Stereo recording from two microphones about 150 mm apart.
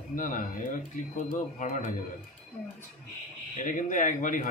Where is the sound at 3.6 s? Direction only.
60° left (ahead or behind).